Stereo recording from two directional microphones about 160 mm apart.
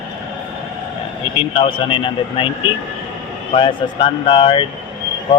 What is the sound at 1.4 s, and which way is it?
Speech, 35° left (ahead or behind).